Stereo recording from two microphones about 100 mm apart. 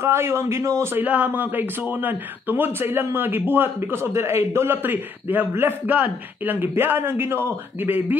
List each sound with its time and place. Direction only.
0.0 s a man's voice: 25° right (ahead or behind)
1.0 s a man's voice: 15° right (ahead or behind)